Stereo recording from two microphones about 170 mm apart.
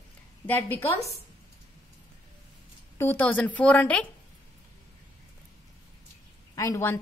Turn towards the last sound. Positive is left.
turn(degrees=15)  # may be behind; listen again after turning